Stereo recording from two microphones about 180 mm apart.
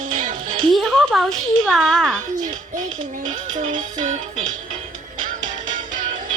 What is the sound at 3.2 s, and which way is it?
Music, 45° right (ahead or behind).